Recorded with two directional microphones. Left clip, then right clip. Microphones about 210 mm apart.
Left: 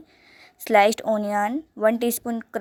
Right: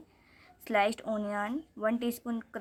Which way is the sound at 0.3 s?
30° left (ahead or behind).